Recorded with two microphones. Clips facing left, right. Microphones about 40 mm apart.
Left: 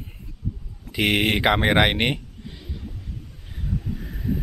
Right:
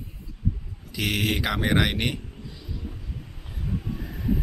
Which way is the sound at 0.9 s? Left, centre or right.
Left.